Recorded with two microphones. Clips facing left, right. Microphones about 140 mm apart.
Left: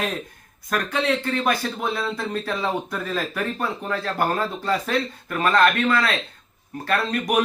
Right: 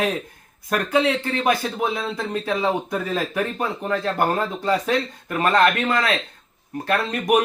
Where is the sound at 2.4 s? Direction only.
15° right (ahead or behind).